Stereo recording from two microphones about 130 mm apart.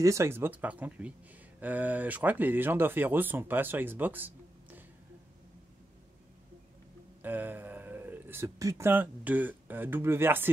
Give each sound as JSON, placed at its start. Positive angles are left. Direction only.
{"t": 0.0, "sound": "speech", "side_deg": -20}
{"t": 7.2, "sound": "speech", "side_deg": -15}